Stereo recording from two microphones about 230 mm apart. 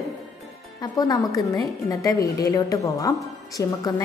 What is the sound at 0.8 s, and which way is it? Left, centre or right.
A woman's voice, centre.